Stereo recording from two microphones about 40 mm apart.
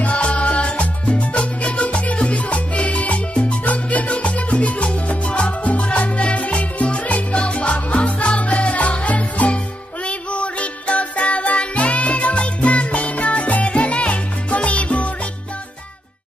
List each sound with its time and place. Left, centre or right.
0.0 s music: left
2.1 s salsa music: left
10.0 s music: left